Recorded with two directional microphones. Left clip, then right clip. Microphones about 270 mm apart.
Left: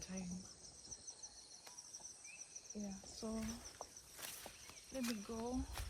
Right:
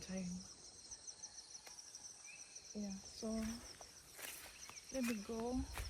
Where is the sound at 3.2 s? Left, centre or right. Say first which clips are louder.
Right 2 dB; centre.